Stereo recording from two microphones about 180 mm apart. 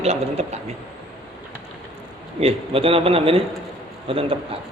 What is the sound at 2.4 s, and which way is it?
A man's voice, 30° right (ahead or behind).